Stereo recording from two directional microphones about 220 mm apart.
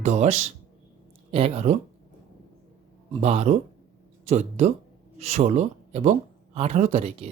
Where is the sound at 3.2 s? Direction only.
30° right (ahead or behind).